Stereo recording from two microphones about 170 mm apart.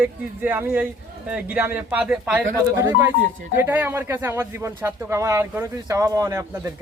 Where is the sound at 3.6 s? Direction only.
10° right (ahead or behind).